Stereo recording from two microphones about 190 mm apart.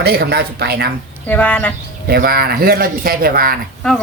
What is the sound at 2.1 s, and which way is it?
Speech, 50° right (ahead or behind).